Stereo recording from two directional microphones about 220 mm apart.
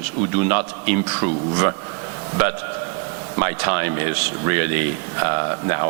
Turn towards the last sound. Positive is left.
turn(degrees=-15)  # may be behind; listen again after turning